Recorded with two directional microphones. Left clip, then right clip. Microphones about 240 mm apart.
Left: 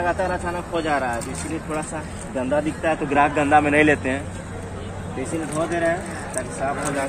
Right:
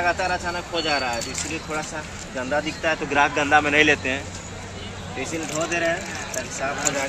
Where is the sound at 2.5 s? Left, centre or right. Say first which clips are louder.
Left 1 dB; left.